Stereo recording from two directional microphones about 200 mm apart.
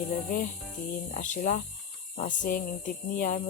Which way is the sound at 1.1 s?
40° left (ahead or behind).